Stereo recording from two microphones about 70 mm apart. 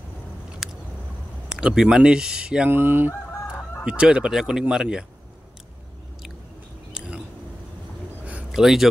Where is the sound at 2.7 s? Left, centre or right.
Right.